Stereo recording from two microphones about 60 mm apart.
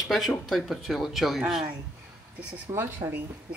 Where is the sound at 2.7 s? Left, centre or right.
Right.